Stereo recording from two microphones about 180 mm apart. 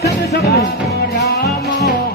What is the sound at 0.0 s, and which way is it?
Music, 60° left (ahead or behind).